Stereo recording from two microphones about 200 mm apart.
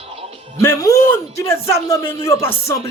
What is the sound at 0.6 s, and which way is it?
Speech, 15° left (ahead or behind).